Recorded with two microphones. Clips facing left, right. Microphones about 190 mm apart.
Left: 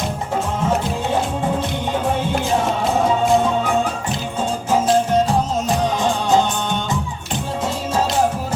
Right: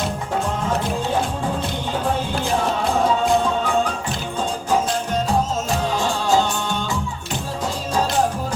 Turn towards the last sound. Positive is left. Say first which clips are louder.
# left 2 dB
turn(degrees=20)  # may be behind; listen again after turning